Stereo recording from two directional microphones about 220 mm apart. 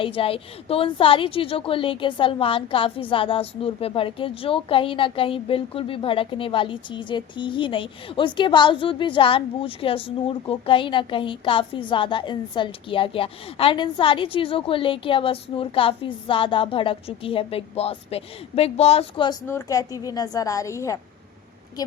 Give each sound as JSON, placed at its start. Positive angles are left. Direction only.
{"t": 0.0, "sound": "a woman's voice", "side_deg": 25}